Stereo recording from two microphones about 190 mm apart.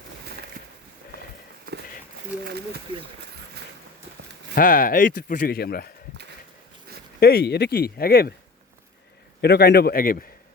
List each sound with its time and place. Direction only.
2.4 s speech: 55° right (ahead or behind)
4.5 s speech: 50° left (ahead or behind)
7.2 s speech: 55° left (ahead or behind)
9.4 s speech: 60° left (ahead or behind)